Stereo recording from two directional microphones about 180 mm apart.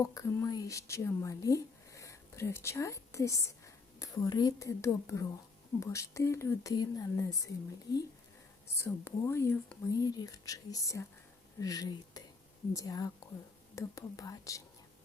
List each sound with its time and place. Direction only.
0.0 s a woman's voice: 20° left (ahead or behind)
8.8 s a woman's voice: 15° left (ahead or behind)